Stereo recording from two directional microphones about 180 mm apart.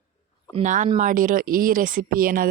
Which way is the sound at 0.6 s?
45° right (ahead or behind).